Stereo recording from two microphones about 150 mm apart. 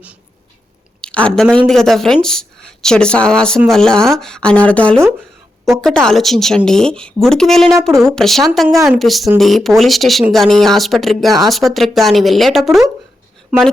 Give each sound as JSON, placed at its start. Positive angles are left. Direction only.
{"t": 1.0, "sound": "speech", "side_deg": 5}